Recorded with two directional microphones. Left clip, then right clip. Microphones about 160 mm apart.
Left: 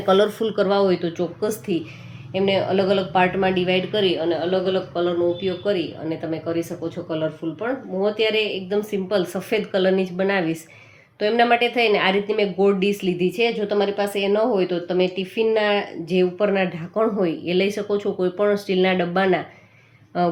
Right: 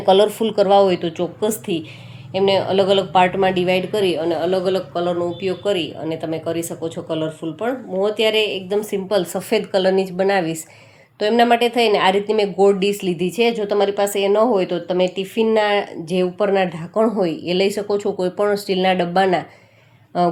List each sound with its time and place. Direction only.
0.0 s a woman's voice: 5° right (ahead or behind); by 20.3 s 25° right (ahead or behind)